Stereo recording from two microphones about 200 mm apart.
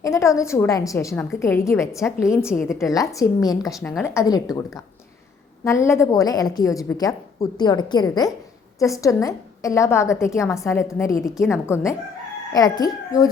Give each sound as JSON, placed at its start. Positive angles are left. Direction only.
{"t": 0.0, "sound": "a woman's voice", "side_deg": 15}
{"t": 3.7, "sound": "a woman's voice", "side_deg": 0}
{"t": 4.0, "sound": "a woman's voice", "side_deg": 15}
{"t": 5.8, "sound": "a woman's voice", "side_deg": 15}